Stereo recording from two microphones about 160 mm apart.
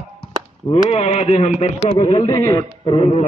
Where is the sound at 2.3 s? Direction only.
20° left (ahead or behind).